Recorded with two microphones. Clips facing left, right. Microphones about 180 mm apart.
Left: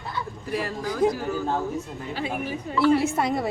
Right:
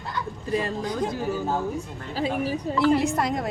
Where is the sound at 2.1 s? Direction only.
35° right (ahead or behind).